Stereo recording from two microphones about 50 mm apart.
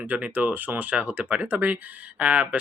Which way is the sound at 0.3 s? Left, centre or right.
Right.